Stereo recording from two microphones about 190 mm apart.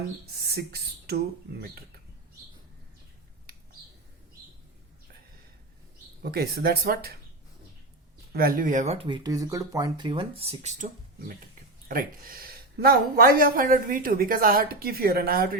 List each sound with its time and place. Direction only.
0.4 s speech: 55° right (ahead or behind)
6.2 s speech: 55° right (ahead or behind)
8.3 s speech: 50° right (ahead or behind)
11.9 s speech: 50° right (ahead or behind)